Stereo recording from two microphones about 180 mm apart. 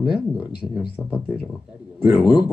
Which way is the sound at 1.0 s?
10° left (ahead or behind).